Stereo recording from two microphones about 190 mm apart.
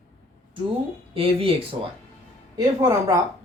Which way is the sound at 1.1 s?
30° right (ahead or behind).